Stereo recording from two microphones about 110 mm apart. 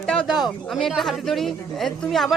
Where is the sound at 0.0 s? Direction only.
5° left (ahead or behind).